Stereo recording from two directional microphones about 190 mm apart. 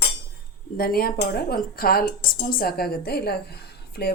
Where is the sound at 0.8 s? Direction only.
50° left (ahead or behind).